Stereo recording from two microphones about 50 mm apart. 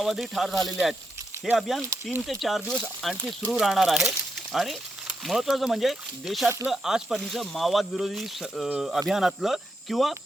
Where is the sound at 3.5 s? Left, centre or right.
Centre.